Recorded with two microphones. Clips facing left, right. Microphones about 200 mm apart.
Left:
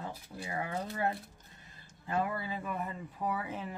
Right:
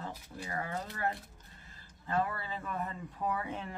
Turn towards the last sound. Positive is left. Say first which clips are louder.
# even
turn(degrees=5)  # may be behind; listen again after turning